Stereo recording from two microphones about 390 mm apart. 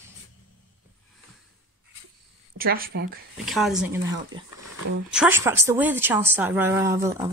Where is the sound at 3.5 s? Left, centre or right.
Centre.